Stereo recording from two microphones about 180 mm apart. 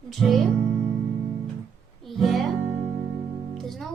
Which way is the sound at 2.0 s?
Centre (ahead or behind).